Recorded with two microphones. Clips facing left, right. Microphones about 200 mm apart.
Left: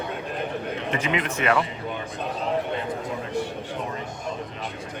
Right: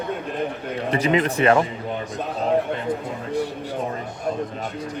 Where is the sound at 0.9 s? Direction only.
35° right (ahead or behind).